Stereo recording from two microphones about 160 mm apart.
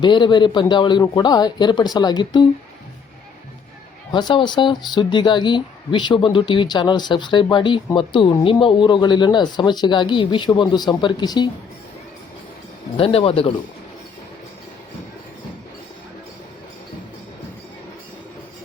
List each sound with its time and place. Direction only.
0.0 s speech: 30° left (ahead or behind)
4.1 s speech: 30° left (ahead or behind)
13.0 s a man's voice: 35° left (ahead or behind)